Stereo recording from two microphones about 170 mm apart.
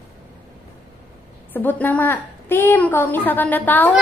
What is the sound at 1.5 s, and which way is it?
A woman's voice, 10° left (ahead or behind).